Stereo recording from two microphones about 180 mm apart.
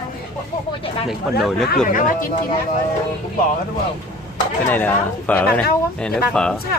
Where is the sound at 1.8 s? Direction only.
45° left (ahead or behind).